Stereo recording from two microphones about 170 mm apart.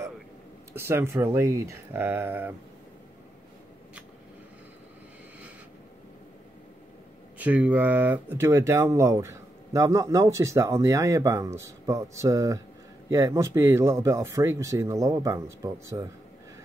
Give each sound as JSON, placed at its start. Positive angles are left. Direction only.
{"t": 0.7, "sound": "speech", "side_deg": -15}
{"t": 7.3, "sound": "speech", "side_deg": -10}